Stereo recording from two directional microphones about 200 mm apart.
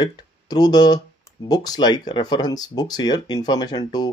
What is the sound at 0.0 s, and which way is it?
Speech, 20° left (ahead or behind).